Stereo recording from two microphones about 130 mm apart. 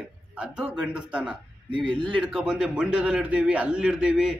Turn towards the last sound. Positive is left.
turn(degrees=-5)  # may be behind; listen again after turning